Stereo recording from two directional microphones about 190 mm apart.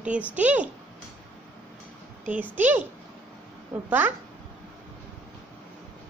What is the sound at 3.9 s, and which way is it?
Speech, 10° right (ahead or behind).